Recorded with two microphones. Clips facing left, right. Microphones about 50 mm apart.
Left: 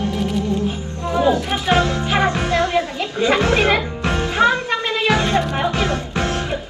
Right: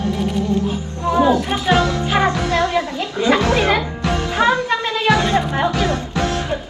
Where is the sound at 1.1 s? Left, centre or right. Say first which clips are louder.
Right 2 dB; right.